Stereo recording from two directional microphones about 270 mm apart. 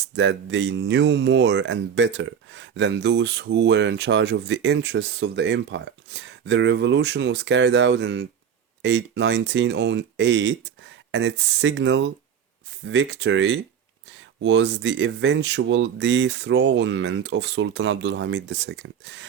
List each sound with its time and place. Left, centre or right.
0.0 s speech: right